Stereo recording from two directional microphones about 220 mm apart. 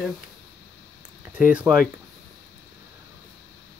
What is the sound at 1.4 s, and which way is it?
Speech, 5° right (ahead or behind).